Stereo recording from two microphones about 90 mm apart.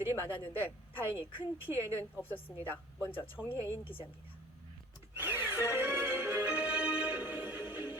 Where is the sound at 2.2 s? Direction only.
20° left (ahead or behind).